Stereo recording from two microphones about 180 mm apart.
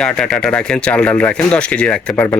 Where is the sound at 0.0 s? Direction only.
5° left (ahead or behind).